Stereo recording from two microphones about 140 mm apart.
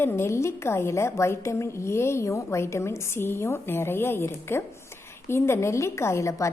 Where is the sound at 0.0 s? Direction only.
15° left (ahead or behind).